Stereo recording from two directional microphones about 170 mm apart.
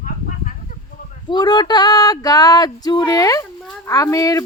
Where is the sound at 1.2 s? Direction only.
25° left (ahead or behind).